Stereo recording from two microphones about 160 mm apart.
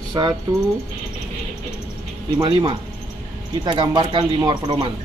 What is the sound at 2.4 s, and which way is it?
Speech, 30° right (ahead or behind).